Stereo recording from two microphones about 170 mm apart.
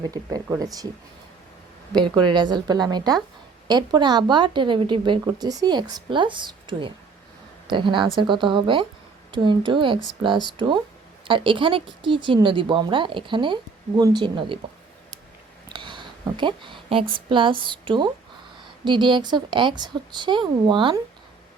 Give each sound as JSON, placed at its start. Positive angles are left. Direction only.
{"t": 0.0, "sound": "speech", "side_deg": -20}
{"t": 1.9, "sound": "speech", "side_deg": -25}
{"t": 11.3, "sound": "speech", "side_deg": -30}
{"t": 15.7, "sound": "a woman's voice", "side_deg": -30}